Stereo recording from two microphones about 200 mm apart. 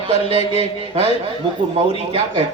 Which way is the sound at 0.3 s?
30° left (ahead or behind).